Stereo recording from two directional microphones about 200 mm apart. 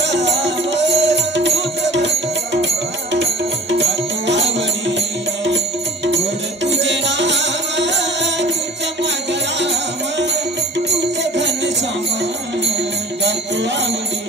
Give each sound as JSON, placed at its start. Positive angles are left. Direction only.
{"t": 0.0, "sound": "music", "side_deg": -60}
{"t": 4.3, "sound": "music", "side_deg": -60}
{"t": 6.6, "sound": "music", "side_deg": -65}
{"t": 9.6, "sound": "music", "side_deg": -60}
{"t": 13.2, "sound": "music", "side_deg": -60}